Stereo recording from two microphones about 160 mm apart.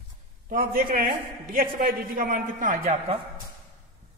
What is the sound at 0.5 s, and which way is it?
A man's voice, 65° right (ahead or behind).